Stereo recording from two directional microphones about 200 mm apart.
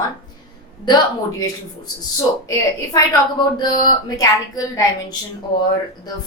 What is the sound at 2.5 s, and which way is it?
A woman's voice, 20° left (ahead or behind).